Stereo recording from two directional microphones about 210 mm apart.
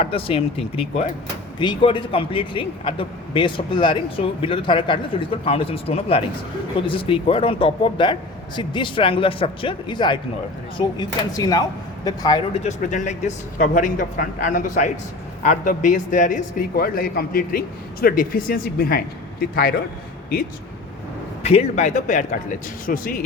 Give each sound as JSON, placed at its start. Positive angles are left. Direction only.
{"t": 0.0, "sound": "a man's voice", "side_deg": 25}
{"t": 12.6, "sound": "speech", "side_deg": 35}
{"t": 21.4, "sound": "speech", "side_deg": 30}